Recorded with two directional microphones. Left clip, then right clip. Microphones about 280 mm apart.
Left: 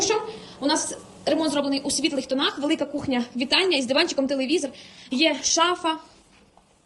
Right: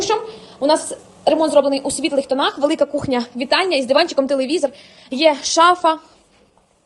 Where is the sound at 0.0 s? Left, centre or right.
Centre.